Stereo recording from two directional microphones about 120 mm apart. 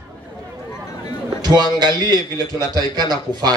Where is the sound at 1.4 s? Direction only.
35° right (ahead or behind).